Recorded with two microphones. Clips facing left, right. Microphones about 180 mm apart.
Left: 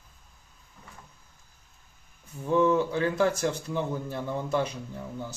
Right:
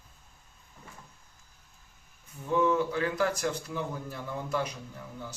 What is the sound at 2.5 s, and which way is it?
Speech, 25° left (ahead or behind).